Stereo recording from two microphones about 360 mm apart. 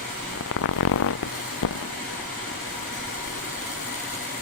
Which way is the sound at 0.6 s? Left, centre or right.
Left.